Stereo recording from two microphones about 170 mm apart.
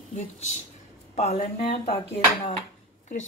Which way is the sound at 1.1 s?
40° left (ahead or behind).